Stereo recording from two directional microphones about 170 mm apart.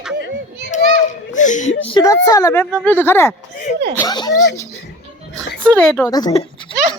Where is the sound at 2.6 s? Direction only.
5° left (ahead or behind); by 4.4 s 25° left (ahead or behind).